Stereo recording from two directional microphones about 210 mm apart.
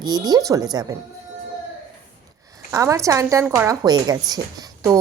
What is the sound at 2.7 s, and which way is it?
Speech, 15° right (ahead or behind).